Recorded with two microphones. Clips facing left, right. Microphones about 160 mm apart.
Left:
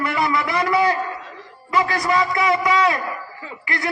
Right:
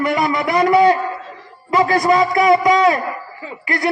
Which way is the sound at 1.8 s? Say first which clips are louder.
Right 6 dB; 40° right (ahead or behind).